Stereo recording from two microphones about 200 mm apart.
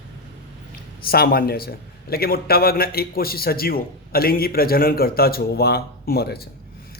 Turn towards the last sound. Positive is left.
turn(degrees=50)  # may be behind; listen again after turning